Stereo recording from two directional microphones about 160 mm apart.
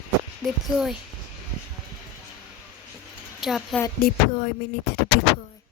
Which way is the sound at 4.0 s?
65° left (ahead or behind).